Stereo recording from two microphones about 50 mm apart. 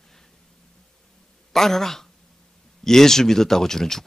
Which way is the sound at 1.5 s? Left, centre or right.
Centre.